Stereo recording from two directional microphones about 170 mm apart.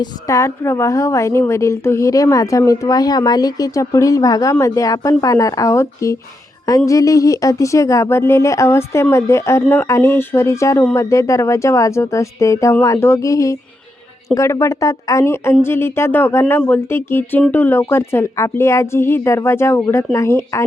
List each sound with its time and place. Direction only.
0.0 s a woman's voice: 15° left (ahead or behind)